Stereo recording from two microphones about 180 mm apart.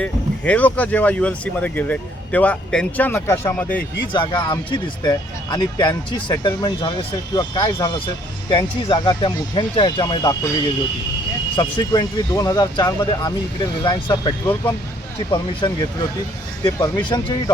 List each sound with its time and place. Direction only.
0.0 s speech: 5° left (ahead or behind)
4.1 s speech: 25° left (ahead or behind)
11.5 s speech: 25° left (ahead or behind)